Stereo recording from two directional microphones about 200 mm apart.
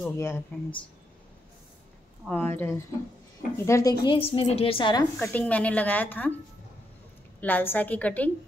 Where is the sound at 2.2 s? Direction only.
10° left (ahead or behind).